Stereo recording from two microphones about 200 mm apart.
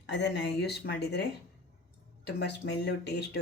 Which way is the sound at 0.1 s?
60° left (ahead or behind).